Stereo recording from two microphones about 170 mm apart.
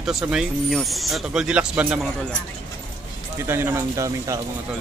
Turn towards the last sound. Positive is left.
turn(degrees=-20)  # may be behind; listen again after turning